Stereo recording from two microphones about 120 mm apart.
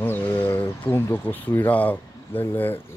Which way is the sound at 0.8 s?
20° left (ahead or behind).